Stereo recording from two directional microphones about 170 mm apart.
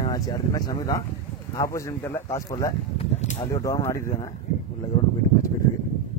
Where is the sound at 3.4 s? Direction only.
20° left (ahead or behind).